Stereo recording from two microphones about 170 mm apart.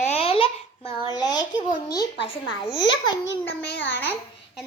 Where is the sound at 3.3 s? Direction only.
90° left.